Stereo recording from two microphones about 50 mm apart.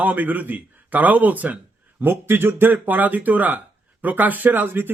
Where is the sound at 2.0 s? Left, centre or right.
Right.